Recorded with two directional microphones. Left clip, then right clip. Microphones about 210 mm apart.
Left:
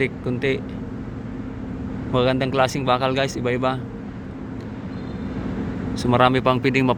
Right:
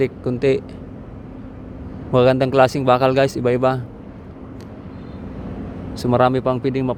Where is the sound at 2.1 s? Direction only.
30° right (ahead or behind).